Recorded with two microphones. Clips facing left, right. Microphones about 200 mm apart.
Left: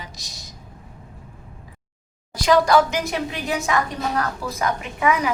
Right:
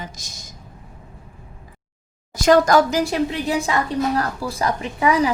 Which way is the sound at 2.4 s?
45° right (ahead or behind).